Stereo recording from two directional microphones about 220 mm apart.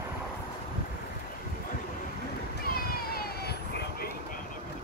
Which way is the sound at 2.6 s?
45° left (ahead or behind).